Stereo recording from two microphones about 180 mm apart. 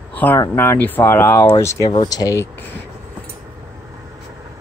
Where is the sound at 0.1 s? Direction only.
10° left (ahead or behind).